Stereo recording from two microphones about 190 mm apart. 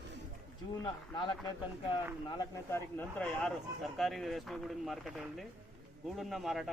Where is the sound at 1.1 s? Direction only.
20° left (ahead or behind).